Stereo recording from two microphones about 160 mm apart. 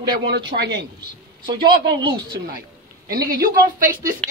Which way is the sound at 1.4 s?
30° right (ahead or behind).